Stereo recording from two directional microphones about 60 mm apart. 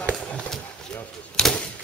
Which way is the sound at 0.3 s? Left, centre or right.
Centre.